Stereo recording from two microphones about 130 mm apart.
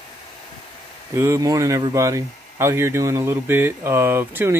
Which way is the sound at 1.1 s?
20° right (ahead or behind).